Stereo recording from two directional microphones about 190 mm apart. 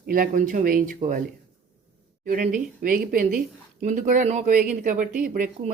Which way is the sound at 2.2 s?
45° right (ahead or behind).